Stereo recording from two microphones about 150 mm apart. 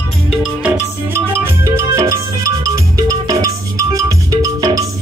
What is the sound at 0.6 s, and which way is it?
Music, 15° right (ahead or behind).